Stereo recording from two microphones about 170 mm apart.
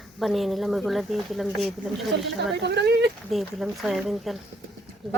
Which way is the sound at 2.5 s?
80° right.